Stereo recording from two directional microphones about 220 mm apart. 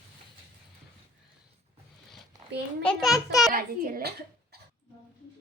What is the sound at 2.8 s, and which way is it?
Speech, centre (ahead or behind).